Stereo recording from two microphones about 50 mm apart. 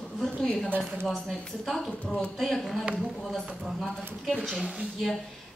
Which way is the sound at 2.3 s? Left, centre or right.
Centre.